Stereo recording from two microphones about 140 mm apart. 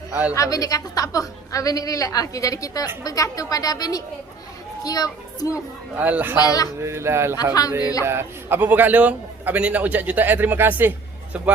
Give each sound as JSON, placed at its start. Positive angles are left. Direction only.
{"t": 0.3, "sound": "a woman's voice", "side_deg": 25}
{"t": 6.0, "sound": "a man's voice", "side_deg": -10}
{"t": 6.4, "sound": "a woman's voice", "side_deg": 25}
{"t": 6.8, "sound": "speech", "side_deg": -20}
{"t": 7.8, "sound": "a woman's voice", "side_deg": 25}
{"t": 8.0, "sound": "a man's voice", "side_deg": -15}